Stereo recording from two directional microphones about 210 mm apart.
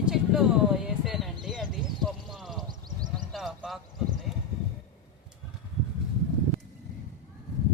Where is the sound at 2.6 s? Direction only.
20° right (ahead or behind).